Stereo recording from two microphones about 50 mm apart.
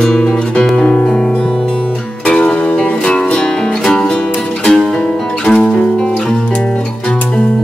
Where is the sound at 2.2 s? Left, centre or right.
Left.